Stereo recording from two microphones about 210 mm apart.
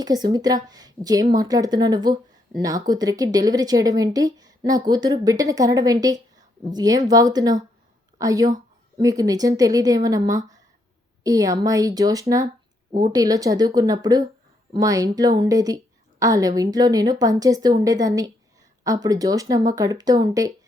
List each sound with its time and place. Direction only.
0.0 s speech: 20° right (ahead or behind)